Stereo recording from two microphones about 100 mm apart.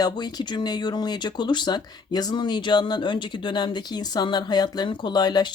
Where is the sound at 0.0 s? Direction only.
40° left (ahead or behind).